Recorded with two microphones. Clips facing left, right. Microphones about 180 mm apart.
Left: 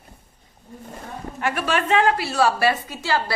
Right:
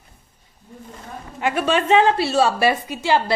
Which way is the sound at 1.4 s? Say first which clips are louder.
Right 4 dB; 20° right (ahead or behind).